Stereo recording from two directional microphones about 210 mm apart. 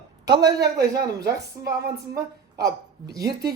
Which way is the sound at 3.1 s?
20° right (ahead or behind).